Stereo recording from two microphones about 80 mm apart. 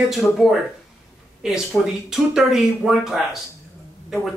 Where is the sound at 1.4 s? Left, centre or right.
Centre.